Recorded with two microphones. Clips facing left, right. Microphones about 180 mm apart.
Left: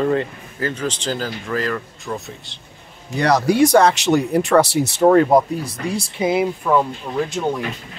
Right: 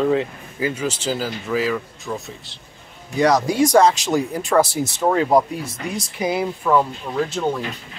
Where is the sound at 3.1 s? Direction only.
65° left (ahead or behind).